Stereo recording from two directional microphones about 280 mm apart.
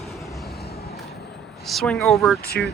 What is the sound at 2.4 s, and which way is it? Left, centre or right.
Speech, left.